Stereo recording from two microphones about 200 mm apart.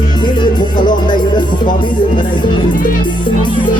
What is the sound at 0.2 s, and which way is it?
Music, 20° left (ahead or behind).